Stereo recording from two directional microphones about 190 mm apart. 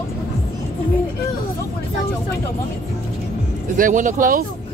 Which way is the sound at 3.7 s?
45° right (ahead or behind).